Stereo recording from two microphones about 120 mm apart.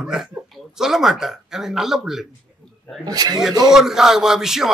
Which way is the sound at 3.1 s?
30° right (ahead or behind).